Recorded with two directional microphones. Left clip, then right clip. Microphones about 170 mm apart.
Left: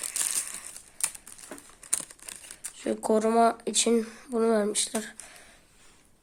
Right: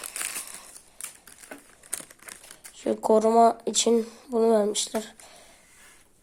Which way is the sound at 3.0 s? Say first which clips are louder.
Right 4 dB; 5° left (ahead or behind).